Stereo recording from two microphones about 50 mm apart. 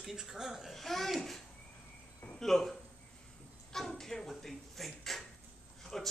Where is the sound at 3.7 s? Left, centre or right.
Centre.